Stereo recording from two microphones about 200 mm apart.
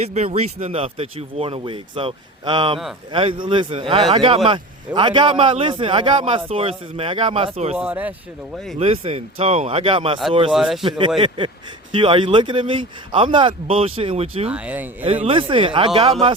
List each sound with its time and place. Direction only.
0.0 s a man's voice: 35° right (ahead or behind)
7.8 s speech: 5° right (ahead or behind)
8.8 s a man's voice: 30° right (ahead or behind)
10.5 s speech: centre (ahead or behind)
10.8 s a man's voice: 25° right (ahead or behind)
14.5 s speech: 5° right (ahead or behind)
15.0 s a man's voice: 30° right (ahead or behind)